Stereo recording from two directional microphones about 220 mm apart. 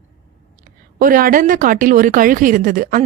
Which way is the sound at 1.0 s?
40° right (ahead or behind).